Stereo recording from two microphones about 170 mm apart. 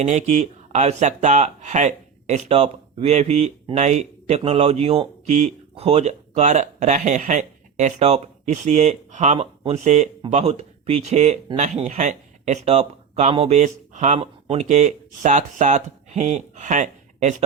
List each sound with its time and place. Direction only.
0.0 s speech: 45° right (ahead or behind)
14.2 s speech: 35° right (ahead or behind)